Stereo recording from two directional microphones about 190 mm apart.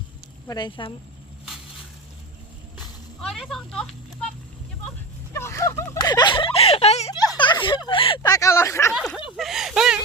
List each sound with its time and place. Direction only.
0.4 s speech: 20° left (ahead or behind)
3.2 s speech: centre (ahead or behind)
5.3 s a sound: 15° left (ahead or behind); by 7.1 s 35° left (ahead or behind)
7.1 s speech: 25° left (ahead or behind)
8.9 s speech: 5° right (ahead or behind)